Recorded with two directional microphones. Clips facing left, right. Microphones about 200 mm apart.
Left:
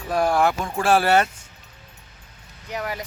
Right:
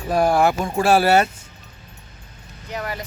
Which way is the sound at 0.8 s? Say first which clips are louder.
Right 2 dB; 10° right (ahead or behind).